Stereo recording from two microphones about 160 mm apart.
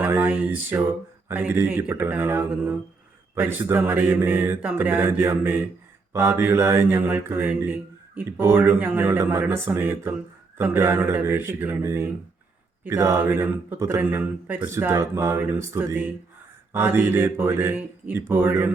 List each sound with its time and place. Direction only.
0.0 s speech: 10° right (ahead or behind)